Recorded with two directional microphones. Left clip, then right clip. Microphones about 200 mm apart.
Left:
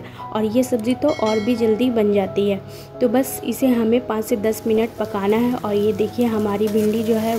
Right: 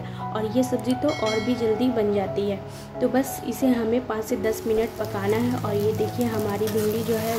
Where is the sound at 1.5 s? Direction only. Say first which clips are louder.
Left 5 dB; 35° left (ahead or behind).